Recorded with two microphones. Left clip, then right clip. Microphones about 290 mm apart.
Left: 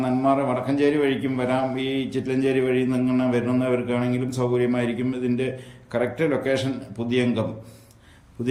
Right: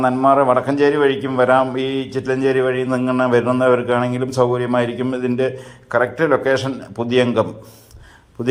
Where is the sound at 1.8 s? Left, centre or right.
Centre.